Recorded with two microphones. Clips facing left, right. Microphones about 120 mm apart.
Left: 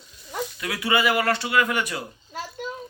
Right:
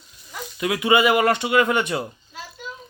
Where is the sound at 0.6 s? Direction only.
20° right (ahead or behind).